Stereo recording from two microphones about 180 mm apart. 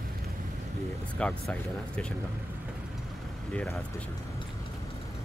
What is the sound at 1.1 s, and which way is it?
Speech, 5° left (ahead or behind).